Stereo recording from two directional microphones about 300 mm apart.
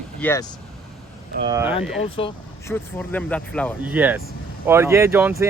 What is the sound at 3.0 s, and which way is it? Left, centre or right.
Speech, centre.